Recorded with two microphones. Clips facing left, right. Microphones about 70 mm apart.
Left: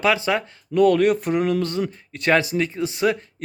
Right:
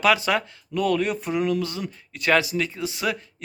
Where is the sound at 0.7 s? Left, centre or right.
Left.